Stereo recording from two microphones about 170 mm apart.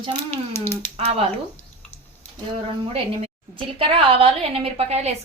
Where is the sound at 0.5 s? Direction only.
15° left (ahead or behind).